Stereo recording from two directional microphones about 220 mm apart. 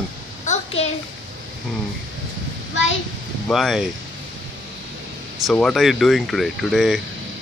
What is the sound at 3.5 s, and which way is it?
Speech, centre (ahead or behind).